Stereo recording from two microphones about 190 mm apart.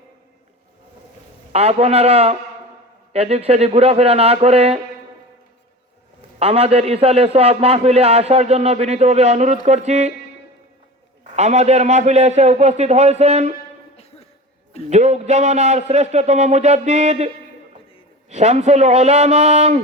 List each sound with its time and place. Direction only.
1.5 s a man's voice: 35° right (ahead or behind)
6.4 s a man's voice: 30° right (ahead or behind)
11.2 s a man's voice: 40° right (ahead or behind)
13.9 s music: 35° left (ahead or behind)
14.8 s a man's voice: 35° right (ahead or behind)